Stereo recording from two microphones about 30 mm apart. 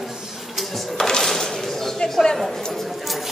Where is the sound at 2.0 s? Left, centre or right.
Left.